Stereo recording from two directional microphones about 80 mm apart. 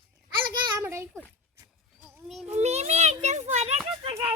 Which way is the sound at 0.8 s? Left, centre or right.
Right.